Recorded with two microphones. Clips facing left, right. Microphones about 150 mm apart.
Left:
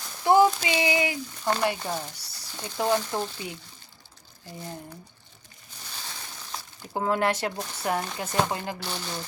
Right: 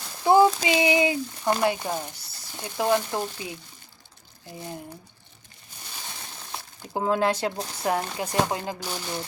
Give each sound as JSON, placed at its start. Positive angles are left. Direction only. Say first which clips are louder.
{"t": 0.3, "sound": "speech", "louder": "right 2 dB", "side_deg": -20}
{"t": 6.5, "sound": "speech", "louder": "right 1 dB", "side_deg": -15}